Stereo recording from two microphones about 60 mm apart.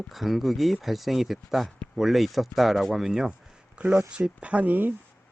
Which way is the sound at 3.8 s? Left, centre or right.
Right.